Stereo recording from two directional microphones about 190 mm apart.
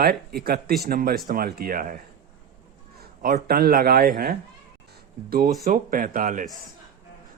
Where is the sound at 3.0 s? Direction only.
50° right (ahead or behind).